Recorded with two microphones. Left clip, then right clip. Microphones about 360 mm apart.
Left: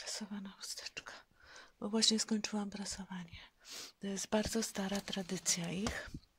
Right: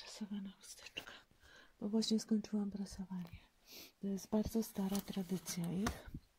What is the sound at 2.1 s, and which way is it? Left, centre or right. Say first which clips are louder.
Speech: left 2 dB; left.